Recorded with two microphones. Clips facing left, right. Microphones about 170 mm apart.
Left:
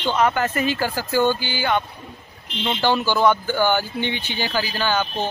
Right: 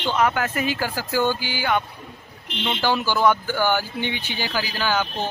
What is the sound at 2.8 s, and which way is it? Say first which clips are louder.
Speech: left 2 dB; 5° right (ahead or behind).